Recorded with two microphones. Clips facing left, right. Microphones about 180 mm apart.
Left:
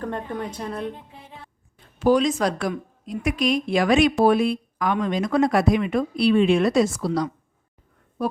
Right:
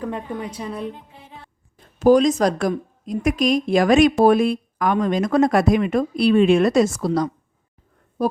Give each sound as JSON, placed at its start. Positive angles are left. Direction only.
{"t": 0.0, "sound": "a woman's voice", "side_deg": -5}
{"t": 2.0, "sound": "speech", "side_deg": -40}
{"t": 8.2, "sound": "a sound", "side_deg": -35}